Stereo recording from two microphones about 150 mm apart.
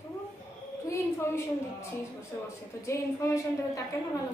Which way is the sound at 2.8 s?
20° left (ahead or behind).